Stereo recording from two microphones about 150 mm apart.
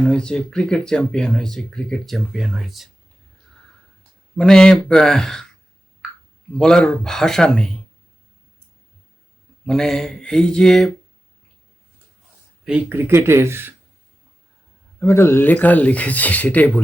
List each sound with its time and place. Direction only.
0.0 s speech: 5° left (ahead or behind)
4.4 s speech: 5° left (ahead or behind)
6.6 s speech: 5° left (ahead or behind)
9.6 s speech: 5° left (ahead or behind)
12.6 s speech: 10° right (ahead or behind)
14.9 s speech: 15° left (ahead or behind)